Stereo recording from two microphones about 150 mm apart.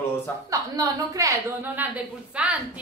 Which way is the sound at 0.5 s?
20° right (ahead or behind).